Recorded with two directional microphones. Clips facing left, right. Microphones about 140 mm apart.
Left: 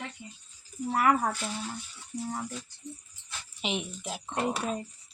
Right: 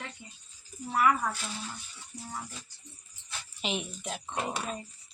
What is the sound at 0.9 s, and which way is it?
Speech, 45° left (ahead or behind).